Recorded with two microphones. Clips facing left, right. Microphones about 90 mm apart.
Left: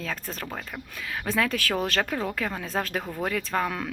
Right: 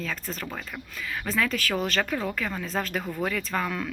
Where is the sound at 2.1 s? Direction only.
25° left (ahead or behind).